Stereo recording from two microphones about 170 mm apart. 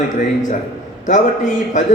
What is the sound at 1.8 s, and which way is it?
Speech, 45° left (ahead or behind).